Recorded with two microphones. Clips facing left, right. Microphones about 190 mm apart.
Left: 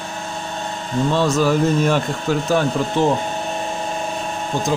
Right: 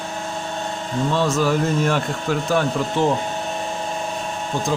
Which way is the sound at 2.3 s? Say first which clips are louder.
Left 2 dB; 30° left (ahead or behind).